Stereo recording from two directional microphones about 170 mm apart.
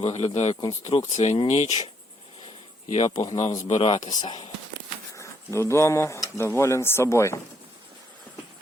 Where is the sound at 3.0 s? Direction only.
25° left (ahead or behind).